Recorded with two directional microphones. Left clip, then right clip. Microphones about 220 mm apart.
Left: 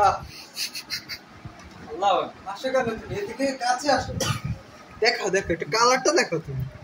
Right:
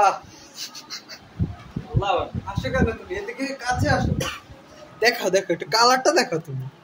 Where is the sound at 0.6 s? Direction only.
20° right (ahead or behind).